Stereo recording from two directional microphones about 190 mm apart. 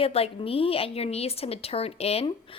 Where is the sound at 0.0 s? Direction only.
30° left (ahead or behind).